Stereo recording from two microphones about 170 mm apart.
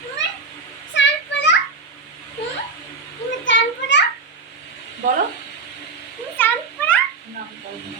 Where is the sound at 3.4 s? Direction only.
90° left.